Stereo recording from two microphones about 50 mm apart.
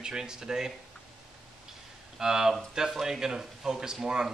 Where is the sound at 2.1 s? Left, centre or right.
Centre.